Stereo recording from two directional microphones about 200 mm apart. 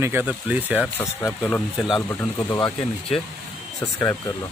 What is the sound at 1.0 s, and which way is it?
Speech, 10° left (ahead or behind).